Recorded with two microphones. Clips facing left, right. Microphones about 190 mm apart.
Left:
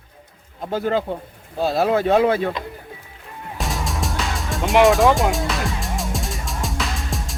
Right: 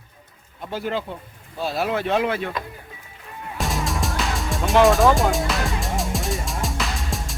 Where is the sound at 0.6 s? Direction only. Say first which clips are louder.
Left 5 dB; 45° left (ahead or behind).